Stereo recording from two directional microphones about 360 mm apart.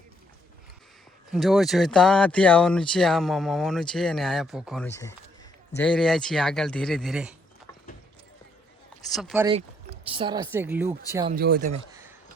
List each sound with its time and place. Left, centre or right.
1.3 s speech: centre
9.0 s speech: centre
11.3 s speech: right